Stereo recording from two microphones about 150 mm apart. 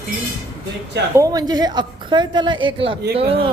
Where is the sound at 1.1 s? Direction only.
25° right (ahead or behind).